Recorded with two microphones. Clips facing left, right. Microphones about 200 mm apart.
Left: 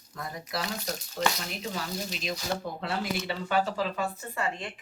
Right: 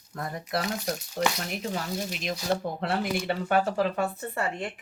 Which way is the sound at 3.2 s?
55° right (ahead or behind).